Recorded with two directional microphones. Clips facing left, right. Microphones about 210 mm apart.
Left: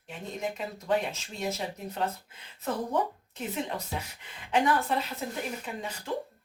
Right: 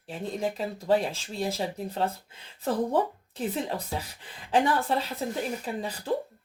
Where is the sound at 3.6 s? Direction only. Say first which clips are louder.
Right 2 dB; 35° right (ahead or behind).